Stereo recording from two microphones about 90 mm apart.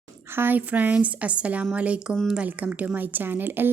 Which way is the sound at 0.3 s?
20° right (ahead or behind).